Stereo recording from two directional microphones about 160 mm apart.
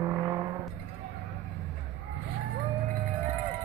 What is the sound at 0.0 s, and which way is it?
Vehicle, 20° right (ahead or behind).